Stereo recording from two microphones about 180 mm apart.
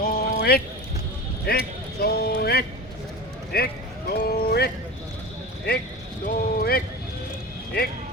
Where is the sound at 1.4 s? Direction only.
60° left (ahead or behind).